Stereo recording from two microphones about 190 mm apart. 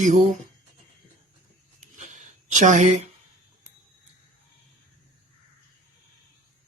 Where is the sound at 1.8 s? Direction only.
40° right (ahead or behind).